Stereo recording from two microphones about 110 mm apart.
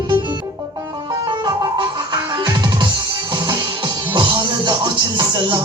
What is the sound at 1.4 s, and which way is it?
Music, 45° right (ahead or behind).